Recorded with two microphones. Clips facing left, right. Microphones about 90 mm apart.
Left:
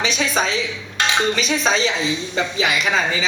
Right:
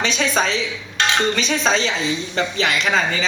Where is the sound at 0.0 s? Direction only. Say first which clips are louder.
Right 1 dB; 5° left (ahead or behind).